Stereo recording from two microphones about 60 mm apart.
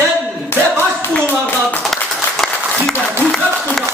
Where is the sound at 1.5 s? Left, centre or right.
Left.